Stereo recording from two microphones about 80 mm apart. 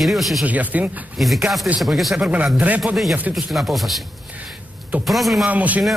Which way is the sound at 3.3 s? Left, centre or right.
Centre.